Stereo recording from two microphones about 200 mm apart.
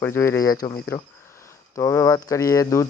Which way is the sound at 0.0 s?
10° left (ahead or behind).